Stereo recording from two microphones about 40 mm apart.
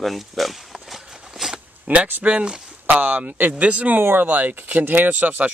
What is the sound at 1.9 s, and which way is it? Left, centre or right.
Speech, right.